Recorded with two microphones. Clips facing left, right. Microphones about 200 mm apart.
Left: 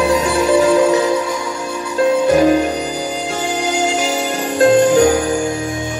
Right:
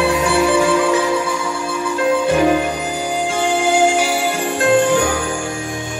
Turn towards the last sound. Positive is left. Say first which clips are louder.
# left 4 dB
turn(degrees=40)  # may be behind; listen again after turning